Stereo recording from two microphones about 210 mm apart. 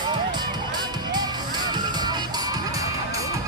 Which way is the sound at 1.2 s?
20° right (ahead or behind).